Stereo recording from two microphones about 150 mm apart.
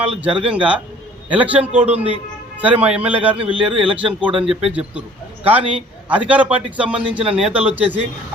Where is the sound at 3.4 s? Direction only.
35° right (ahead or behind).